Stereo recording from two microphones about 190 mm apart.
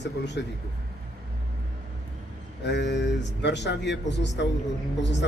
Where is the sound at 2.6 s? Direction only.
65° left (ahead or behind).